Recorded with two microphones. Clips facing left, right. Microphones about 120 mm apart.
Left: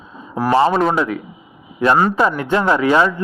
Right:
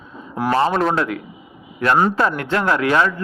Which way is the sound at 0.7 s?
5° left (ahead or behind).